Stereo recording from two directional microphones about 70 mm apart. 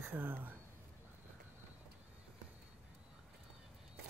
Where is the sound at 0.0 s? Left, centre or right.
Right.